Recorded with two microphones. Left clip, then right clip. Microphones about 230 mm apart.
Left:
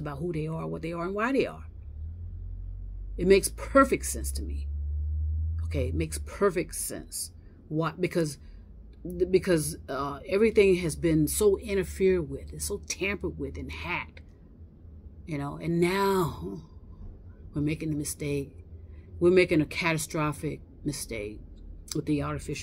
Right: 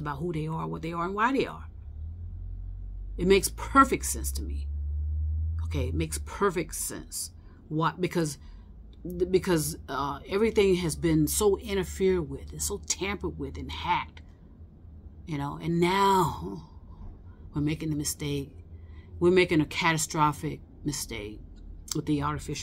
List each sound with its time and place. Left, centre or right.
0.0 s speech: centre
3.2 s speech: centre
5.7 s speech: centre
15.2 s a woman's voice: centre